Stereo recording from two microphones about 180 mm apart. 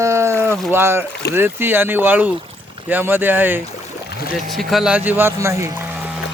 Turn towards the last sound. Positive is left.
turn(degrees=-15)  # may be behind; listen again after turning